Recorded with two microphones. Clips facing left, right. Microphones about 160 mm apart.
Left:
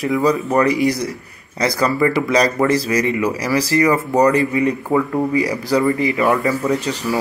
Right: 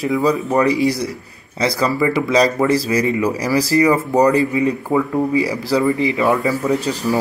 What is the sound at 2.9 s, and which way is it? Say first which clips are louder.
Speech: right 1 dB; 30° right (ahead or behind).